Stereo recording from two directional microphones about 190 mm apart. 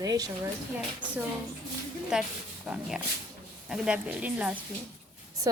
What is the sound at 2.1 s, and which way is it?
Speech, 5° right (ahead or behind).